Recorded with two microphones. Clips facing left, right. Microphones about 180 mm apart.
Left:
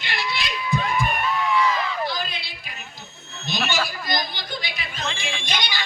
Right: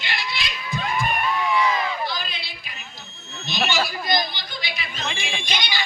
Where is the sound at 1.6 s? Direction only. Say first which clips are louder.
Even; 10° right (ahead or behind).